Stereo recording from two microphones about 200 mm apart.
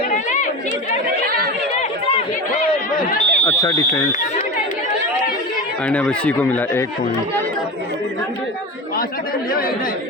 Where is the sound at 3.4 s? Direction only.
15° left (ahead or behind).